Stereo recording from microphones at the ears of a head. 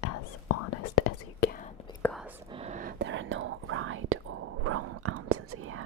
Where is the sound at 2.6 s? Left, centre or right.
Right.